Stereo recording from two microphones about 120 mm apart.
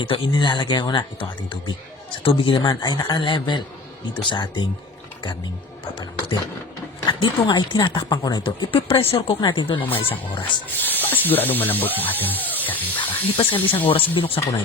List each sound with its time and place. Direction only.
0.0 s speech: 45° left (ahead or behind)
6.0 s speech: 40° left (ahead or behind); by 9.3 s 55° left (ahead or behind)
9.4 s speech: 40° left (ahead or behind)
10.7 s speech: 15° left (ahead or behind)
13.3 s speech: 50° left (ahead or behind)